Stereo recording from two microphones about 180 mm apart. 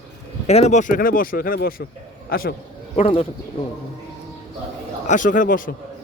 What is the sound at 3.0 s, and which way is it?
Speech, 30° left (ahead or behind).